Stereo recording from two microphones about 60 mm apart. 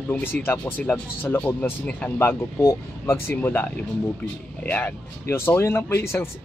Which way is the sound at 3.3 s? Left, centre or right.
Left.